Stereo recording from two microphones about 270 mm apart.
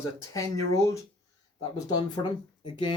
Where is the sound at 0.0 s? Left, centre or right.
Centre.